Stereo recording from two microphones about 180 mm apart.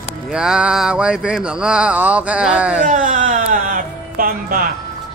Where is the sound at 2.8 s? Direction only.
45° right (ahead or behind).